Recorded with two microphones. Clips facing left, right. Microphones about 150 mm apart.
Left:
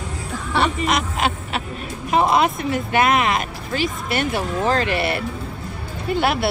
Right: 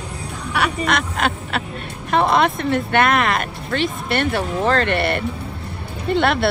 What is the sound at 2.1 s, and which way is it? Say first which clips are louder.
Speech: right 1 dB; 5° left (ahead or behind).